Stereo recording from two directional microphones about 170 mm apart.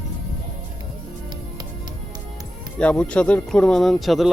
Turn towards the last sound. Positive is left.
turn(degrees=0)  # may be behind; listen again after turning